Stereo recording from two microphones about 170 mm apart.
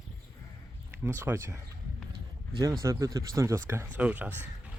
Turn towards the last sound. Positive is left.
turn(degrees=-10)  # may be behind; listen again after turning